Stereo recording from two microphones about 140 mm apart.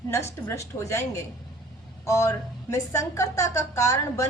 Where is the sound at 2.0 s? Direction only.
20° left (ahead or behind).